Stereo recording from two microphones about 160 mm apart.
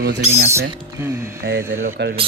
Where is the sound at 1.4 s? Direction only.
90° right.